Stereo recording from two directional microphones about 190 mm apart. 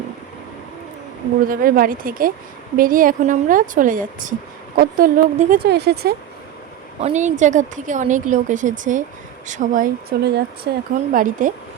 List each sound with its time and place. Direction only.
1.5 s speech: 50° right (ahead or behind)
7.0 s a woman's voice: 40° right (ahead or behind)